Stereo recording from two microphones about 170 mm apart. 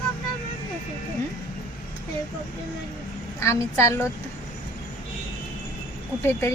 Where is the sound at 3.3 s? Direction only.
15° left (ahead or behind).